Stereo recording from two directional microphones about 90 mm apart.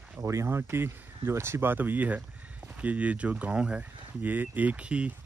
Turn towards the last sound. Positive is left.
turn(degrees=-15)  # may be behind; listen again after turning